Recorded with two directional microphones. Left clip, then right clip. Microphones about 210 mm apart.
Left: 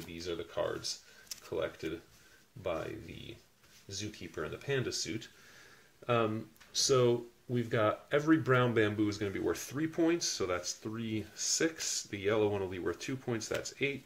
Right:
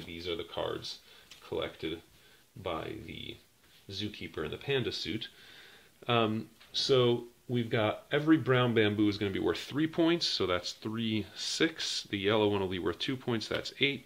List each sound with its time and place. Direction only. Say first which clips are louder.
0.6 s speech: left 2 dB; 30° right (ahead or behind)
2.6 s speech: even; 30° right (ahead or behind)
3.9 s speech: right 3 dB; 30° right (ahead or behind)
6.7 s speech: right 1 dB; 20° right (ahead or behind); by 13.9 s 40° right (ahead or behind)